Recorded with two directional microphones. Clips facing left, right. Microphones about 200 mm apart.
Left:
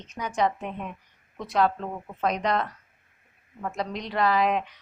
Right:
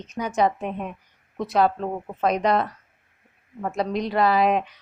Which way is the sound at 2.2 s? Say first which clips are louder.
Right 4 dB; 10° right (ahead or behind).